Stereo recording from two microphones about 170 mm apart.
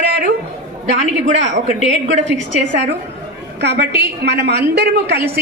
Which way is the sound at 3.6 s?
75° right (ahead or behind).